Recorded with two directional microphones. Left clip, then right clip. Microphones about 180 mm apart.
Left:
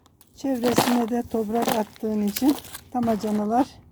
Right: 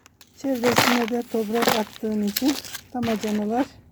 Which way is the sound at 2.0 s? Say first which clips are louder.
Even; 15° left (ahead or behind).